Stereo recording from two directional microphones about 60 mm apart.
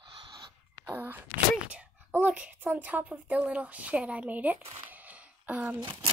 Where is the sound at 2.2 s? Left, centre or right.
Right.